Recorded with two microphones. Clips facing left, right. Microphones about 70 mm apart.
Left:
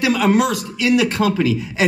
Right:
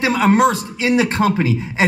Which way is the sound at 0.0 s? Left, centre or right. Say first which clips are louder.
Right 2 dB; right.